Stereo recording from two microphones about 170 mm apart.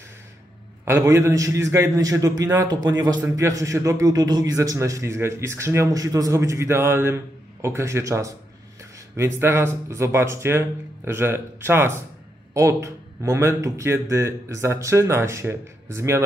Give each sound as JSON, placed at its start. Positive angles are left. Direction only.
{"t": 0.8, "sound": "a man's voice", "side_deg": -20}